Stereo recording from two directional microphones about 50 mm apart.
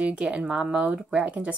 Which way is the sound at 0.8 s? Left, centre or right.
Right.